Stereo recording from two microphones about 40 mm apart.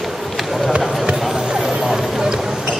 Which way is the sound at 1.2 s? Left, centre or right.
Centre.